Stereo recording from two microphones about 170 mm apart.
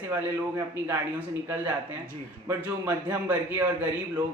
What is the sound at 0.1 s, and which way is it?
Speech, 15° right (ahead or behind).